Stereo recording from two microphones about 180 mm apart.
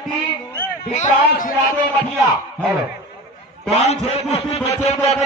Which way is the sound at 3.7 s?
35° left (ahead or behind).